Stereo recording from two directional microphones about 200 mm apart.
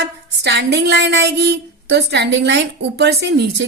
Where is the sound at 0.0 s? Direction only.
60° right (ahead or behind).